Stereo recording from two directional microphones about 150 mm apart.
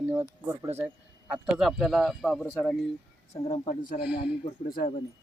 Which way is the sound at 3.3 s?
50° left (ahead or behind).